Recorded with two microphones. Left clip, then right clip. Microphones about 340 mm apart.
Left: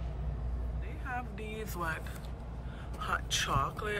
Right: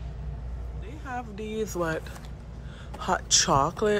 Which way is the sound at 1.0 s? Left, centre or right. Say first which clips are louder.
Right 5 dB; centre.